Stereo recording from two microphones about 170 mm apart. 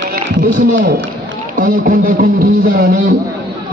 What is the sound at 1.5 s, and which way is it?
A man's voice, 55° right (ahead or behind).